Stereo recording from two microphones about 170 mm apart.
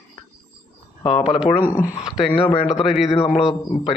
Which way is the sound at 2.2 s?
30° left (ahead or behind).